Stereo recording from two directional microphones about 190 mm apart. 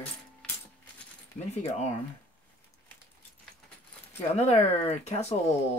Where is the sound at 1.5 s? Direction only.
35° left (ahead or behind).